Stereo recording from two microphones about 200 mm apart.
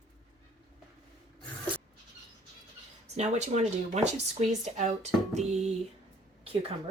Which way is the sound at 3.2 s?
35° right (ahead or behind).